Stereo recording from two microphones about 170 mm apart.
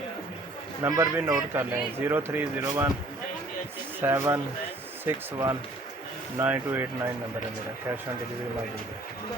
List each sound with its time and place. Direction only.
0.8 s speech: 15° right (ahead or behind)
4.0 s speech: 15° right (ahead or behind)